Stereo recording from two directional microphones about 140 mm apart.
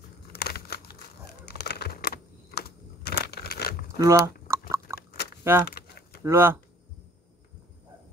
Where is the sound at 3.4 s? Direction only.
90° left.